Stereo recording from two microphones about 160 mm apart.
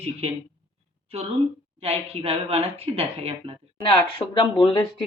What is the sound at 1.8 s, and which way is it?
Speech, 40° right (ahead or behind).